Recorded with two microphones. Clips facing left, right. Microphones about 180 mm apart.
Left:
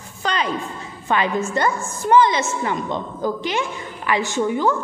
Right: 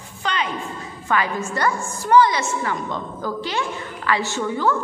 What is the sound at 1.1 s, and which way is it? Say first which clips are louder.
A woman's voice: left 2 dB; 20° left (ahead or behind).